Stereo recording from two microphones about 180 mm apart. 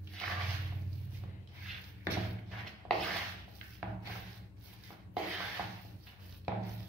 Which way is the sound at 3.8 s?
10° right (ahead or behind).